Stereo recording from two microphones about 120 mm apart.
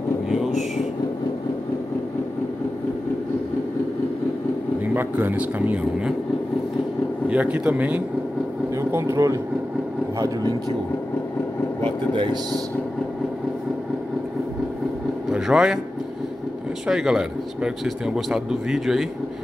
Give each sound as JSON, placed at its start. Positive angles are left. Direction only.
{"t": 4.9, "sound": "speech", "side_deg": -15}
{"t": 7.2, "sound": "speech", "side_deg": -10}
{"t": 8.7, "sound": "speech", "side_deg": -25}
{"t": 11.8, "sound": "speech", "side_deg": -45}
{"t": 15.2, "sound": "speech", "side_deg": -5}
{"t": 16.8, "sound": "a man's voice", "side_deg": -5}